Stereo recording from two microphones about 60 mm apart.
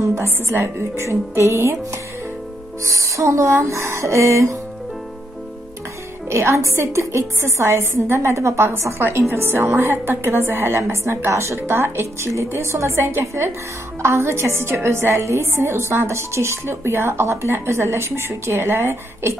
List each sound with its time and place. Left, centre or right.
0.1 s a woman's voice: right
2.8 s music: right
6.2 s a woman's voice: right